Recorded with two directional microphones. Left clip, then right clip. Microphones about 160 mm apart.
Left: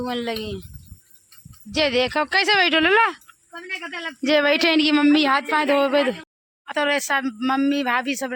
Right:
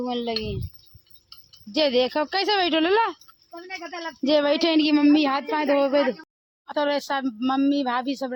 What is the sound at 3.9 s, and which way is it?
Speech, 50° right (ahead or behind).